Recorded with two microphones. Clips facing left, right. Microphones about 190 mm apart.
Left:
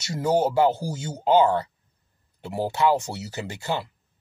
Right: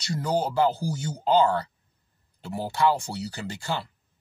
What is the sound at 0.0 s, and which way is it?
Speech, 25° left (ahead or behind).